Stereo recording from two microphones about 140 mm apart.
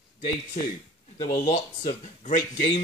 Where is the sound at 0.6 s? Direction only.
60° left (ahead or behind).